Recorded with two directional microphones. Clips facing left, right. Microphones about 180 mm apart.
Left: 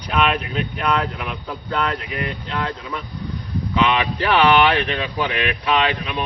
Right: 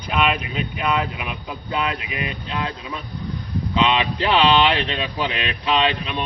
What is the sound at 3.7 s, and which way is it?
Speech, 25° right (ahead or behind).